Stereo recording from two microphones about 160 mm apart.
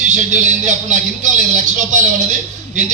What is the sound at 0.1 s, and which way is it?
Speech, 50° right (ahead or behind).